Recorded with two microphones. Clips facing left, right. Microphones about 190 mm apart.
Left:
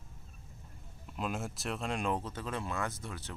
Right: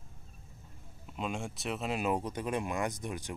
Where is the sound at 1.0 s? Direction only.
Centre (ahead or behind).